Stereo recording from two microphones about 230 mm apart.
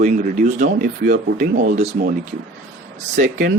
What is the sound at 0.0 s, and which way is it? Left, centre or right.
A man's voice, right.